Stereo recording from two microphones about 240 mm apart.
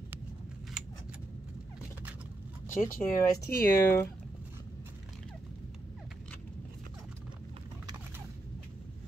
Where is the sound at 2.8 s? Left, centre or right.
Centre.